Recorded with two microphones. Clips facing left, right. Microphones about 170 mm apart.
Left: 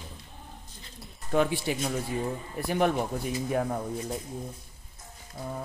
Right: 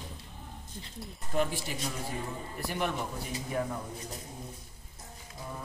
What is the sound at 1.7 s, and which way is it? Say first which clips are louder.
Speech: left 9 dB; 90° left.